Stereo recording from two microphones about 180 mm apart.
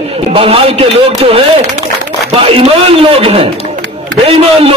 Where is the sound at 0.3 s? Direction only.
30° right (ahead or behind).